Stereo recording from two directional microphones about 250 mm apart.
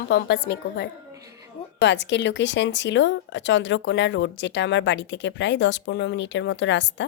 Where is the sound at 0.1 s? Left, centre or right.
Left.